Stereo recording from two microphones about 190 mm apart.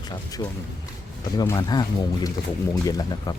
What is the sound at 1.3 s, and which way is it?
Speech, 20° left (ahead or behind).